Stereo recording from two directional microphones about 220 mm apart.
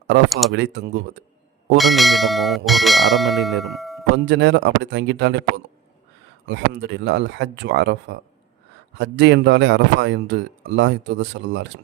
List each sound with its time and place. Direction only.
0.3 s speech: centre (ahead or behind)
0.5 s a man's voice: 55° right (ahead or behind)
1.8 s speech: centre (ahead or behind)
4.1 s a man's voice: 55° right (ahead or behind)